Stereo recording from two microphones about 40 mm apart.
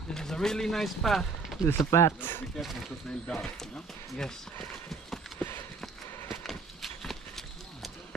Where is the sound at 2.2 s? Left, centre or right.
Left.